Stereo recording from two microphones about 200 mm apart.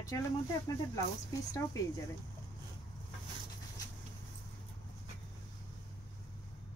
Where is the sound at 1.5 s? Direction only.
15° left (ahead or behind).